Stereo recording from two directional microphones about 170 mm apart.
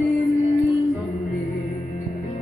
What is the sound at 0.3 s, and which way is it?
Music, 20° left (ahead or behind).